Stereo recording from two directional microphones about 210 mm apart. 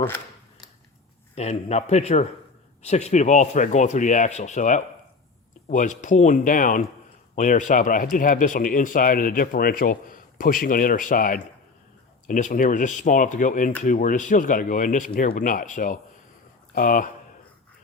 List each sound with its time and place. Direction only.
1.4 s speech: 30° left (ahead or behind)